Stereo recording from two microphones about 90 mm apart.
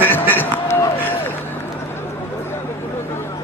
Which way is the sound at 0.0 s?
20° left (ahead or behind).